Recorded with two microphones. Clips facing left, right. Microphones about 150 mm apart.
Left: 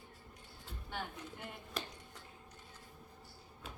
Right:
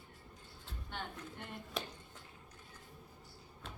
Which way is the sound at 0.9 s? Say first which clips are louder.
Left 1 dB; 5° left (ahead or behind).